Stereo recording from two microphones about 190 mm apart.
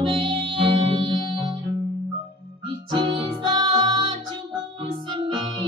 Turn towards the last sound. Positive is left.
turn(degrees=-25)  # may be behind; listen again after turning